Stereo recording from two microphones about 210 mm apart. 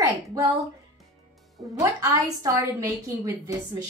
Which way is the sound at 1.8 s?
15° right (ahead or behind).